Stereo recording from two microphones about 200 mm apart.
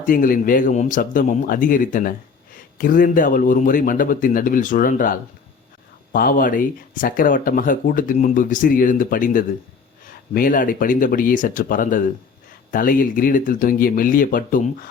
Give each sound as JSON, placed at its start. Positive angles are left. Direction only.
{"t": 0.0, "sound": "speech", "side_deg": 40}